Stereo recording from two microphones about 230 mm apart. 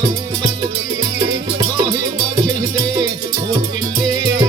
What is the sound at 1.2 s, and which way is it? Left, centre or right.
Music, centre.